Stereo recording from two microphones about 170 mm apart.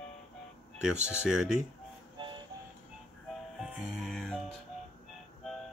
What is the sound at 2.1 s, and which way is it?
Music, 30° right (ahead or behind).